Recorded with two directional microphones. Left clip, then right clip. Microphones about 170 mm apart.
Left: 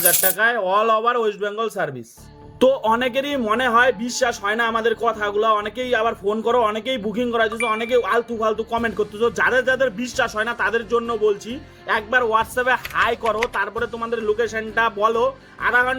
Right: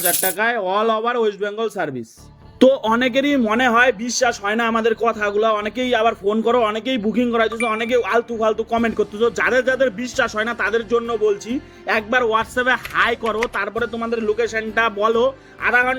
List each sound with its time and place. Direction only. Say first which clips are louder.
0.0 s speech: left 1 dB; 30° right (ahead or behind)